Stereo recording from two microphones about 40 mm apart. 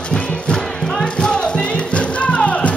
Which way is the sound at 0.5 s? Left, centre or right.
Centre.